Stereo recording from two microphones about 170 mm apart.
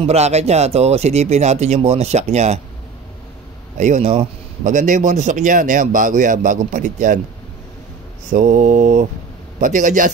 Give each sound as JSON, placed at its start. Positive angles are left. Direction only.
{"t": 0.0, "sound": "speech", "side_deg": -40}
{"t": 3.7, "sound": "a man's voice", "side_deg": -45}
{"t": 8.3, "sound": "a man's voice", "side_deg": -45}